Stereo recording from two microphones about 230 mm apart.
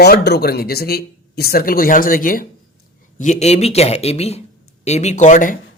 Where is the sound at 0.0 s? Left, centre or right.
Left.